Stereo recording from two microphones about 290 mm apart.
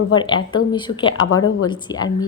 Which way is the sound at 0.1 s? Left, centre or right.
Centre.